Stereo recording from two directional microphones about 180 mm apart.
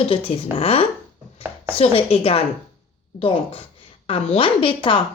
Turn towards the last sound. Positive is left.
turn(degrees=30)  # may be behind; listen again after turning